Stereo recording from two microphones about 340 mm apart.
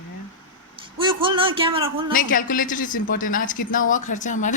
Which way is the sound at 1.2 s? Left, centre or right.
Centre.